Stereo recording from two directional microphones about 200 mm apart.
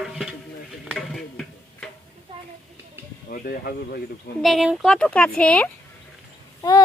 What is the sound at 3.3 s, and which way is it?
Speech, 45° left (ahead or behind).